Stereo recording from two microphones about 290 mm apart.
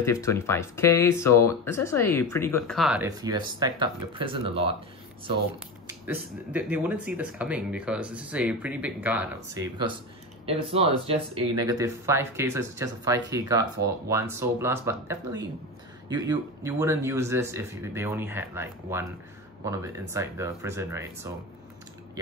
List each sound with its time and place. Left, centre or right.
0.0 s speech: centre
3.1 s speech: centre
5.9 s speech: centre
10.4 s speech: centre